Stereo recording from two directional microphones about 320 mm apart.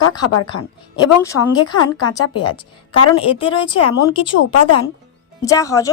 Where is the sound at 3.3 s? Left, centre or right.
Centre.